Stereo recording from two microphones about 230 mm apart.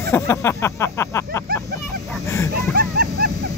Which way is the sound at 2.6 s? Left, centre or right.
Right.